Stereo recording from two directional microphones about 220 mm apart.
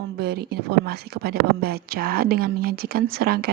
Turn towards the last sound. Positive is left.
turn(degrees=-45)  # may be behind; listen again after turning